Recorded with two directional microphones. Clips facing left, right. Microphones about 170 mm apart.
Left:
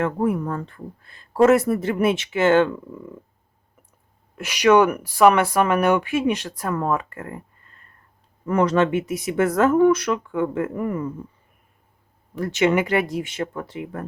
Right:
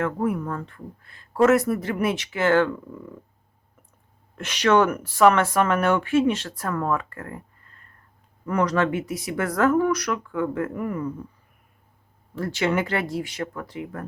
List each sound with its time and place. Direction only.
0.0 s speech: 30° left (ahead or behind)
4.4 s speech: 10° left (ahead or behind)
8.4 s speech: 25° left (ahead or behind)
12.4 s speech: 20° left (ahead or behind)